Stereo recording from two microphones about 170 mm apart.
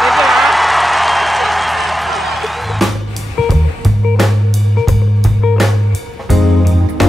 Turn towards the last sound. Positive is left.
turn(degrees=0)  # may be behind; listen again after turning